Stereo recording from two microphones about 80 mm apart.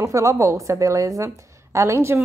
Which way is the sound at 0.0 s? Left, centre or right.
Right.